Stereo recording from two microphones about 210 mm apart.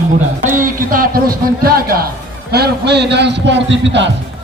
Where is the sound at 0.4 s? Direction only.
40° right (ahead or behind).